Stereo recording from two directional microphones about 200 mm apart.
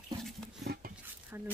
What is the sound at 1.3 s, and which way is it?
Speech, 10° right (ahead or behind).